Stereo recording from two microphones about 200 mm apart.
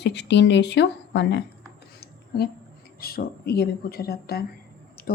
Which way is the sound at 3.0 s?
50° left (ahead or behind).